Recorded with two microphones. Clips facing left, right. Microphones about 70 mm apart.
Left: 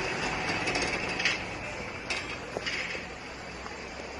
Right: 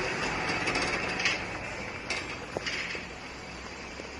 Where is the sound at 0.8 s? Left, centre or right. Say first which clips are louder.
Right 1 dB; centre.